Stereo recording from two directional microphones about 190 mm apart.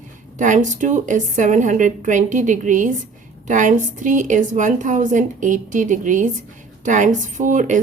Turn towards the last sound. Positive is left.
turn(degrees=-40)  # may be behind; listen again after turning